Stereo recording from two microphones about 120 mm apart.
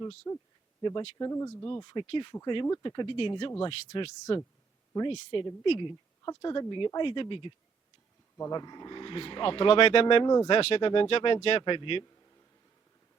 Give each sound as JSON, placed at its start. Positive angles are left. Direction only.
{"t": 0.3, "sound": "speech", "side_deg": 30}
{"t": 0.8, "sound": "speech", "side_deg": 40}
{"t": 1.2, "sound": "speech", "side_deg": 25}
{"t": 1.6, "sound": "speech", "side_deg": 40}
{"t": 6.2, "sound": "speech", "side_deg": 35}
{"t": 10.2, "sound": "speech", "side_deg": 35}
{"t": 10.5, "sound": "speech", "side_deg": 55}
{"t": 11.6, "sound": "speech", "side_deg": 45}